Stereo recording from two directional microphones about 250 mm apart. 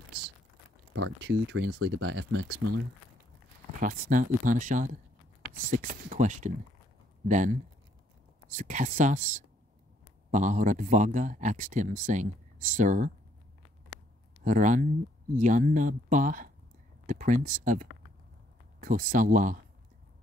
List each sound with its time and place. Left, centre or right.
0.9 s speech: right
3.8 s speech: right
8.5 s speech: right
14.4 s speech: right